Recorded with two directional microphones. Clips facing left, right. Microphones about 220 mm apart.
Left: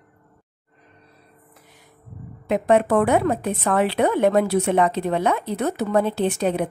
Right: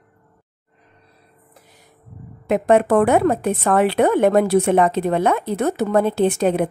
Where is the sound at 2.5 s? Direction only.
50° right (ahead or behind).